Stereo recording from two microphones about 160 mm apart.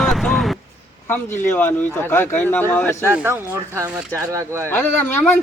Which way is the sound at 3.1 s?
15° right (ahead or behind).